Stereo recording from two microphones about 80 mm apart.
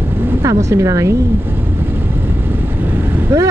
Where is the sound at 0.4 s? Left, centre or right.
Right.